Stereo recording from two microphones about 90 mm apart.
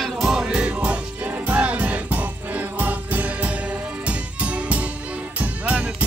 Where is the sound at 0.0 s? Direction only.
5° right (ahead or behind).